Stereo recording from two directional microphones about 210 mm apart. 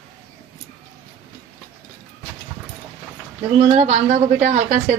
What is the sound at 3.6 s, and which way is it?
A woman's voice, 30° right (ahead or behind).